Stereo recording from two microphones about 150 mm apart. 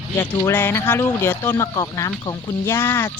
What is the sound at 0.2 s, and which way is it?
Speech, 15° left (ahead or behind).